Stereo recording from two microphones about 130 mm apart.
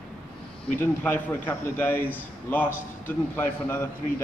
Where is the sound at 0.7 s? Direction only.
15° left (ahead or behind).